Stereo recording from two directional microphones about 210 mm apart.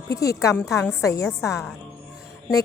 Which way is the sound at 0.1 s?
15° left (ahead or behind).